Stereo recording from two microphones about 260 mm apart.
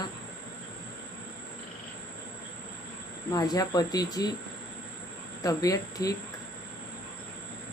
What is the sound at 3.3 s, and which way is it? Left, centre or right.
Speech, centre.